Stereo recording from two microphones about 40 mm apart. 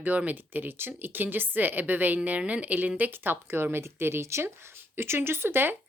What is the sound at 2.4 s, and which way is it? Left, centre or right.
Speech, right.